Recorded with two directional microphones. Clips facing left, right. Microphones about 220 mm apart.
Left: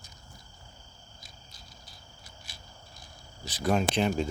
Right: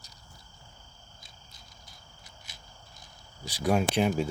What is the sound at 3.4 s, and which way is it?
Speech, 10° right (ahead or behind).